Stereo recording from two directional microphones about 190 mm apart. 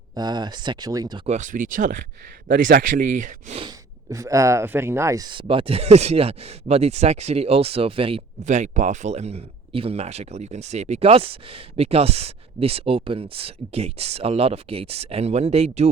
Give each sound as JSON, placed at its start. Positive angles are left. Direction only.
{"t": 0.1, "sound": "speech", "side_deg": -20}
{"t": 1.3, "sound": "speech", "side_deg": -40}
{"t": 3.7, "sound": "speech", "side_deg": -15}